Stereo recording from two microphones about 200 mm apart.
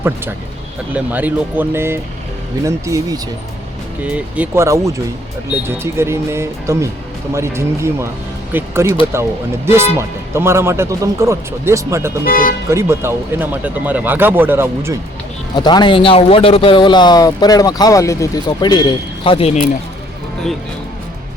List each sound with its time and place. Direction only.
0.9 s speech: 10° right (ahead or behind)
12.2 s speech: 45° left (ahead or behind)
12.7 s speech: 15° right (ahead or behind)
15.5 s speech: 20° left (ahead or behind)